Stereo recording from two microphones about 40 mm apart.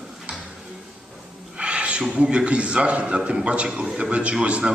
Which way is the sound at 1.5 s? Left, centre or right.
Right.